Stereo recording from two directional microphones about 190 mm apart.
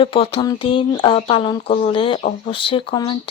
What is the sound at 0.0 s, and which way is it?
Speech, 30° left (ahead or behind).